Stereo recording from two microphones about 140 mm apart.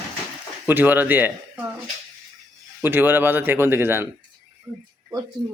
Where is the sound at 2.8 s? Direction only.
15° right (ahead or behind).